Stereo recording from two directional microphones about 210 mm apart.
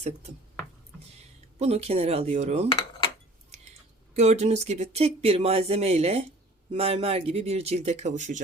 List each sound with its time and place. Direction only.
1.5 s speech: 30° right (ahead or behind)
4.1 s speech: 30° right (ahead or behind)